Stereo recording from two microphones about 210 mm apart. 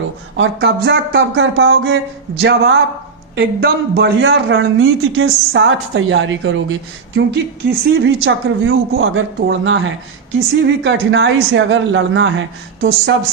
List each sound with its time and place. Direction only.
0.3 s a man's voice: 60° right (ahead or behind)
7.2 s a man's voice: 55° right (ahead or behind)